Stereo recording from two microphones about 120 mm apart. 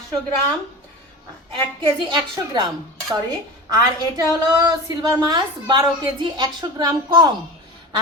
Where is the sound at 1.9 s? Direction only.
40° right (ahead or behind).